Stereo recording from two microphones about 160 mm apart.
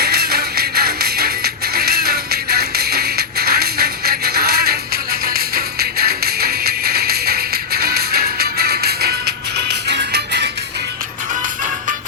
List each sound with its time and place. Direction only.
0.0 s music: 80° right